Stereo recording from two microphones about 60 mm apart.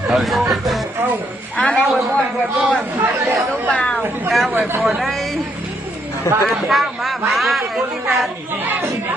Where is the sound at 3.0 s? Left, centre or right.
Right.